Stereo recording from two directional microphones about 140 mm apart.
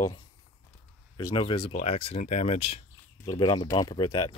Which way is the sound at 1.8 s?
45° left (ahead or behind).